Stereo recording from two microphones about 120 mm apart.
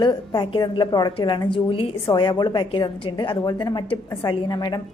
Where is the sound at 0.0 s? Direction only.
40° left (ahead or behind).